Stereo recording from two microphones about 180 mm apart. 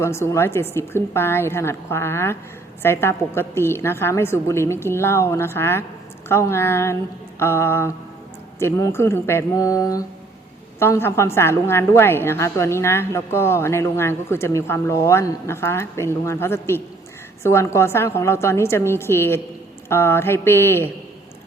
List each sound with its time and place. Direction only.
0.0 s a woman's voice: 15° left (ahead or behind)